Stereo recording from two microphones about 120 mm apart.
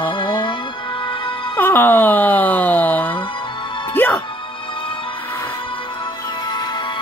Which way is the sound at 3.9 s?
15° left (ahead or behind).